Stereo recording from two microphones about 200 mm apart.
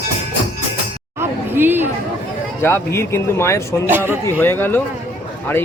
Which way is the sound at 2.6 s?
10° left (ahead or behind).